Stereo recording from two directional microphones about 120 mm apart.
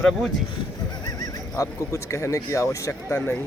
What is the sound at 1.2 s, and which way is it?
Speech, 25° left (ahead or behind).